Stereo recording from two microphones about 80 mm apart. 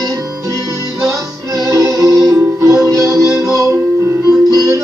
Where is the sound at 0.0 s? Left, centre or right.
Right.